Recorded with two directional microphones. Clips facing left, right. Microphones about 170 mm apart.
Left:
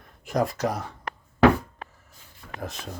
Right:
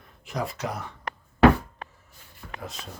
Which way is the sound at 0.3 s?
45° left (ahead or behind).